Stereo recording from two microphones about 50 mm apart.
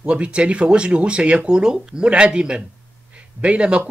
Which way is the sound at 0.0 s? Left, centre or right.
Right.